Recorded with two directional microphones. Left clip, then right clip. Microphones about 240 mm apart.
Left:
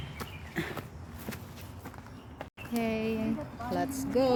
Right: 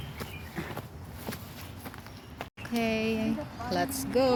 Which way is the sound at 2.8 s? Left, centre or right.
Centre.